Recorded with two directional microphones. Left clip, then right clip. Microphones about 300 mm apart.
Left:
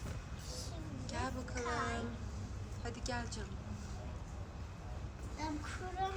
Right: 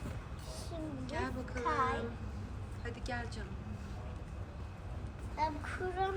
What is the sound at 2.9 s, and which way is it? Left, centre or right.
Speech, centre.